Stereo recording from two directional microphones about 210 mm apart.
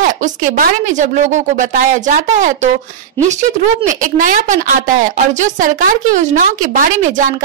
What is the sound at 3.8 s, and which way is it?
A woman's voice, 40° right (ahead or behind).